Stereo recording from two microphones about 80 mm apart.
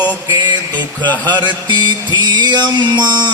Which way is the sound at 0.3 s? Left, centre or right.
Right.